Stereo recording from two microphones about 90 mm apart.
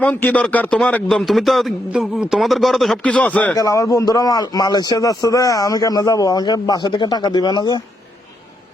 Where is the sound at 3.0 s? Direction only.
15° left (ahead or behind).